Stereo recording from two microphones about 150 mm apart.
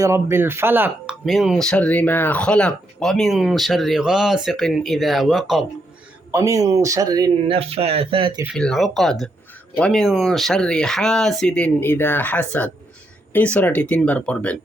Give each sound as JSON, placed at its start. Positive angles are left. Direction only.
{"t": 0.0, "sound": "speech", "side_deg": -20}
{"t": 1.2, "sound": "speech", "side_deg": 0}
{"t": 6.3, "sound": "speech", "side_deg": -20}
{"t": 7.4, "sound": "speech", "side_deg": -40}
{"t": 8.5, "sound": "speech", "side_deg": 5}